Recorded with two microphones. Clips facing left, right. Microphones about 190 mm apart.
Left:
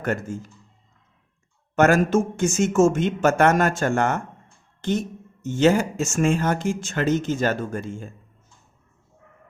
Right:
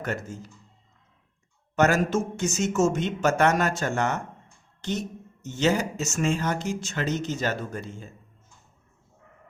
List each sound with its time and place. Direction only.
0.0 s speech: 50° left (ahead or behind)
1.7 s speech: 55° left (ahead or behind)